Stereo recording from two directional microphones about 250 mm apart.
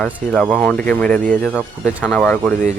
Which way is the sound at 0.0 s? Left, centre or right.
Centre.